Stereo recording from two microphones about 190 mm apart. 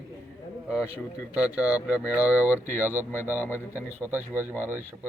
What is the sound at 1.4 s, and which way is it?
Speech, 5° right (ahead or behind).